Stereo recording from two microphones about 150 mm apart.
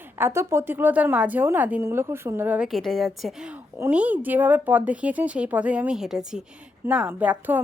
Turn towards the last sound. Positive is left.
turn(degrees=-10)  # may be behind; listen again after turning